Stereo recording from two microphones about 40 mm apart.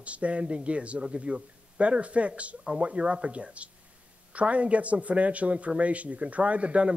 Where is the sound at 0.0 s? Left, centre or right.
Right.